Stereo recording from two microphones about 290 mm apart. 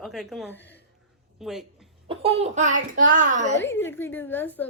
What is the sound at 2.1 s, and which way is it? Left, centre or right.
A child's voice, centre.